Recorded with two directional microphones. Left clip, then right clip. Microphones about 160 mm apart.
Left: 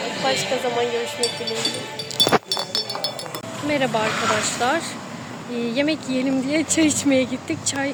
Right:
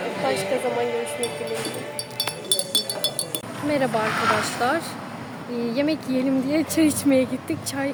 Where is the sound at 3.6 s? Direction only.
5° right (ahead or behind).